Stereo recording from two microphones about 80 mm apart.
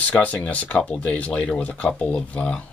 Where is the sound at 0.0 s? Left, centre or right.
Centre.